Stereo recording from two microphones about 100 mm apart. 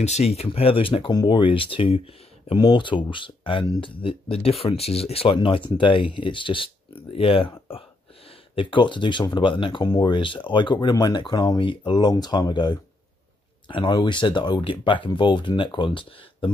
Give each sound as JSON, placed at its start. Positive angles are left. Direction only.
{"t": 0.0, "sound": "speech", "side_deg": 90}
{"t": 1.1, "sound": "speech", "side_deg": 50}
{"t": 2.5, "sound": "speech", "side_deg": 50}
{"t": 8.5, "sound": "speech", "side_deg": 55}